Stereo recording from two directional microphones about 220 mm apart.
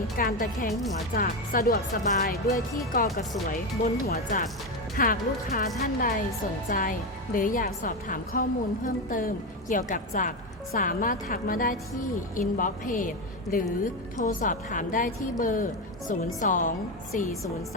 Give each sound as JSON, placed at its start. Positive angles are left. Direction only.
{"t": 0.2, "sound": "a woman's voice", "side_deg": 40}